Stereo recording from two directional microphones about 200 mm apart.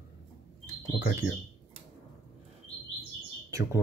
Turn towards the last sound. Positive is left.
turn(degrees=-15)  # may be behind; listen again after turning